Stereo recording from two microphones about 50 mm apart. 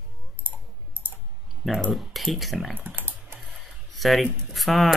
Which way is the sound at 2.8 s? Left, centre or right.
Right.